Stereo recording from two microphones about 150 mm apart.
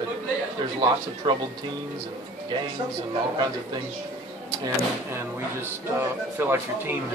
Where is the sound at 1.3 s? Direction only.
30° right (ahead or behind).